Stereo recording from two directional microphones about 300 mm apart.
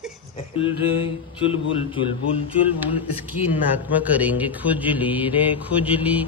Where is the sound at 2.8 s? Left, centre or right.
Centre.